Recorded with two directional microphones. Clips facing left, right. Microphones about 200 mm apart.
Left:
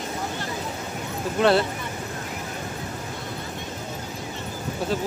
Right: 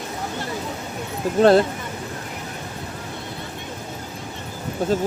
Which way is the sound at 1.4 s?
45° right (ahead or behind).